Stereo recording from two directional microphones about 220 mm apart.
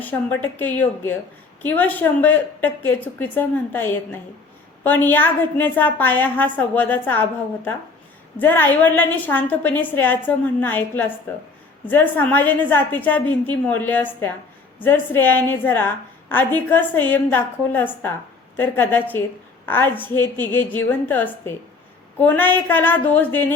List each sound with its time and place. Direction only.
0.0 s a woman's voice: 10° left (ahead or behind)